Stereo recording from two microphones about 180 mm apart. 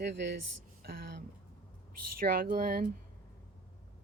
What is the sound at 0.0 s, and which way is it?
Speech, 75° right (ahead or behind).